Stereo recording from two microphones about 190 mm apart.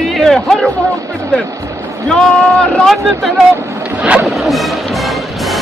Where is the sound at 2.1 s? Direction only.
5° left (ahead or behind).